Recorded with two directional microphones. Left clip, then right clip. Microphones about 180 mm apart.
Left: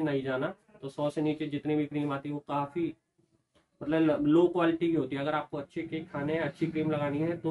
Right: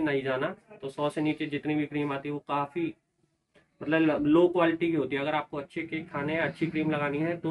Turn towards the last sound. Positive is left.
turn(degrees=15)  # may be behind; listen again after turning